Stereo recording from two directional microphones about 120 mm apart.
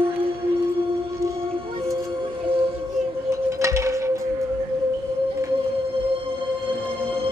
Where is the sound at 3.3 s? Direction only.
25° right (ahead or behind).